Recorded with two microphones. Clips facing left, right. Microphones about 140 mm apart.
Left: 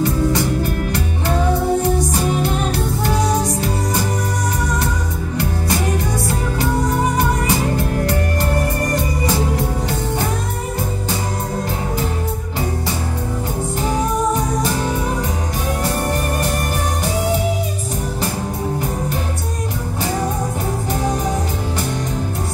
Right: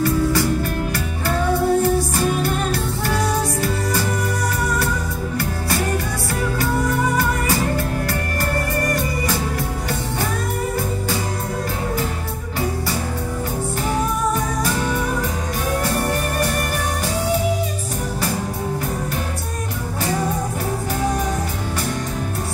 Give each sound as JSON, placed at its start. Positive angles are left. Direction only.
{"t": 0.0, "sound": "music", "side_deg": 20}
{"t": 7.2, "sound": "music", "side_deg": 20}